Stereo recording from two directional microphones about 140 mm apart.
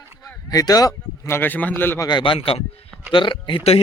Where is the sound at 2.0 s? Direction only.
35° left (ahead or behind).